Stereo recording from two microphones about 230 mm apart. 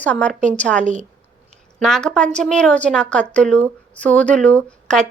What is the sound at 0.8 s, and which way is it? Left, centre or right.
Speech, right.